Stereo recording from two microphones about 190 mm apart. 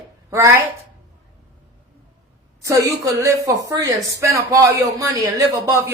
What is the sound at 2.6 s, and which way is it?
A woman's voice, 15° right (ahead or behind).